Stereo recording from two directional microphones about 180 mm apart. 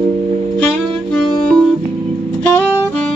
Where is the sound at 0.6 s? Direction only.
5° left (ahead or behind).